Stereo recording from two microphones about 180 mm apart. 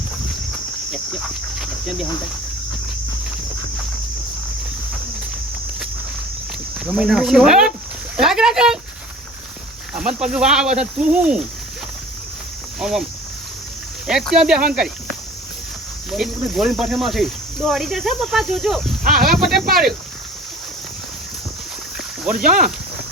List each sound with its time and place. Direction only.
0.9 s speech: centre (ahead or behind)
6.7 s speech: 5° right (ahead or behind)
9.9 s speech: 5° right (ahead or behind)
12.8 s speech: centre (ahead or behind)
14.1 s speech: centre (ahead or behind)
16.1 s speech: centre (ahead or behind)
19.0 s speech: 55° right (ahead or behind)
22.2 s speech: 5° right (ahead or behind)
22.4 s speech: 50° right (ahead or behind)